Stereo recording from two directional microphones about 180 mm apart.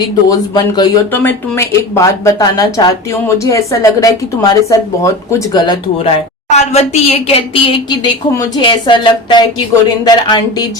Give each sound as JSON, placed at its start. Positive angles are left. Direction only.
{"t": 0.0, "sound": "speech", "side_deg": 25}
{"t": 1.1, "sound": "speech", "side_deg": 10}
{"t": 6.5, "sound": "a woman's voice", "side_deg": 40}